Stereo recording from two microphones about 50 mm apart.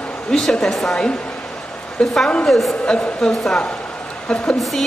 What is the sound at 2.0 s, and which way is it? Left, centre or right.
Speech, centre.